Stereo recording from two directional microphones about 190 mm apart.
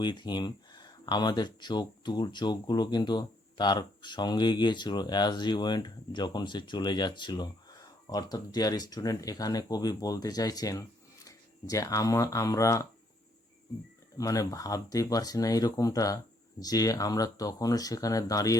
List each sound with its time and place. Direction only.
0.0 s speech: 25° left (ahead or behind)
14.2 s speech: 20° left (ahead or behind)